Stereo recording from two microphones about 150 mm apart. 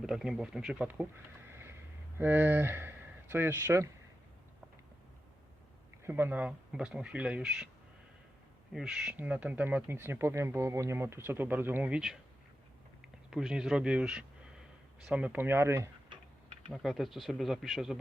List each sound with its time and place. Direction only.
0.0 s speech: 5° right (ahead or behind)
2.1 s speech: 15° right (ahead or behind)
6.1 s speech: 15° right (ahead or behind)
8.7 s speech: 5° right (ahead or behind)
13.3 s speech: 5° right (ahead or behind)
16.7 s speech: centre (ahead or behind)